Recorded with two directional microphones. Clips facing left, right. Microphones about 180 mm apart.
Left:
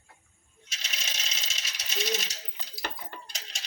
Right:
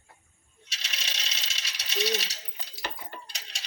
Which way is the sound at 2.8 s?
45° left (ahead or behind).